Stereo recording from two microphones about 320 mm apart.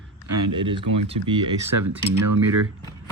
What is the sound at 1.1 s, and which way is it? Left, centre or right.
Speech, right.